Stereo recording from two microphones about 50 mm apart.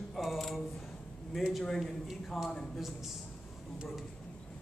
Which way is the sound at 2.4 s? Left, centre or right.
Centre.